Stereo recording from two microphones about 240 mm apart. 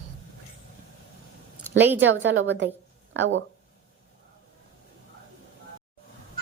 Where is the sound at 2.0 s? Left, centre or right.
Right.